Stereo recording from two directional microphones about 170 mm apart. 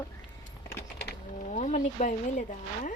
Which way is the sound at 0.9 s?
75° left (ahead or behind).